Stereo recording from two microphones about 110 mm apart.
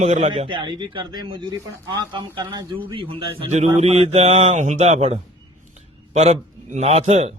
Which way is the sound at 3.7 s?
70° right (ahead or behind).